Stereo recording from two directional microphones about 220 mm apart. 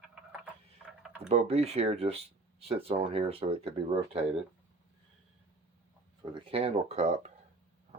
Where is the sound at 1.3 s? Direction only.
30° right (ahead or behind).